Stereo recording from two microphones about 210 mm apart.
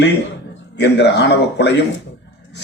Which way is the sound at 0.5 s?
55° left (ahead or behind).